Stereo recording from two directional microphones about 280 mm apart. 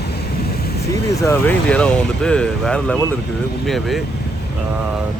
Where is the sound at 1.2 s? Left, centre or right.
Centre.